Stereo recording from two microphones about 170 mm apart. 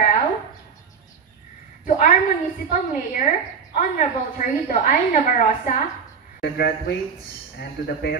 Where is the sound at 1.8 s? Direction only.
50° left (ahead or behind).